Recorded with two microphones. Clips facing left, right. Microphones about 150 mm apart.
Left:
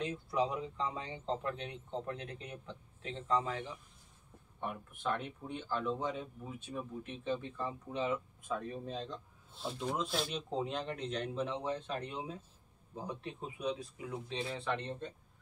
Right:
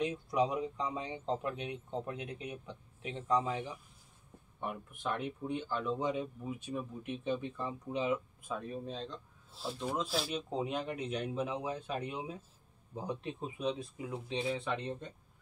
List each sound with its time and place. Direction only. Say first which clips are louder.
0.0 s speech: right 2 dB; 15° right (ahead or behind)